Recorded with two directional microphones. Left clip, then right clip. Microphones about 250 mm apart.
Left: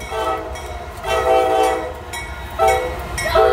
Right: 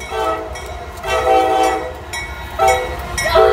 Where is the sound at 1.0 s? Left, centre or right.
Centre.